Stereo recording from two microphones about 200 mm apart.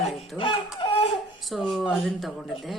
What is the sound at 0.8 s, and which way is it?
Laughter, 30° left (ahead or behind).